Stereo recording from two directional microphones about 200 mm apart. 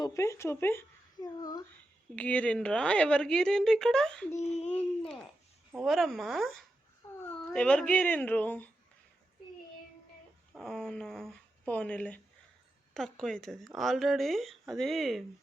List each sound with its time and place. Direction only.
0.0 s speech: 15° left (ahead or behind)
2.1 s a woman's voice: 5° left (ahead or behind)
4.4 s speech: 35° left (ahead or behind)
4.7 s a woman's voice: 5° left (ahead or behind)
10.5 s a woman's voice: 5° left (ahead or behind)